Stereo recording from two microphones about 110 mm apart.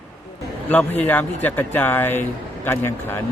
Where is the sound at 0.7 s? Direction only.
15° left (ahead or behind).